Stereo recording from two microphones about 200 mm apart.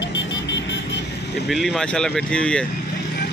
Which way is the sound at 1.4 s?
Centre (ahead or behind).